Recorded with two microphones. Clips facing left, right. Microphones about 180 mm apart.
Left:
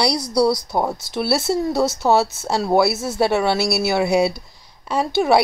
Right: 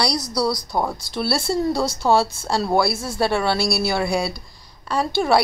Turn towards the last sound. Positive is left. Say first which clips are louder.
# left 2 dB
turn(degrees=20)  # may be behind; listen again after turning